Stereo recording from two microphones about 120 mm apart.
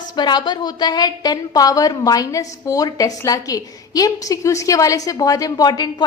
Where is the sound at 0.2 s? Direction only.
35° left (ahead or behind).